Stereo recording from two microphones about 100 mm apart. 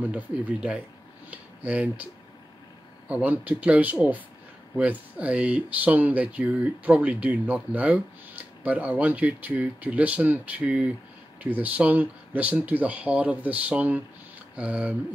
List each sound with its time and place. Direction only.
0.0 s speech: 15° right (ahead or behind)
3.1 s speech: 15° right (ahead or behind)